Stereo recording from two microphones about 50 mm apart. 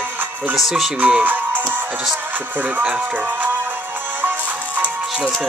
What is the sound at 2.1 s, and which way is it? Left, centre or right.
Music, right.